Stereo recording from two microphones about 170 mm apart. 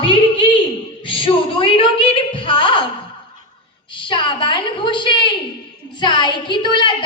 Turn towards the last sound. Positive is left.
turn(degrees=30)  # may be behind; listen again after turning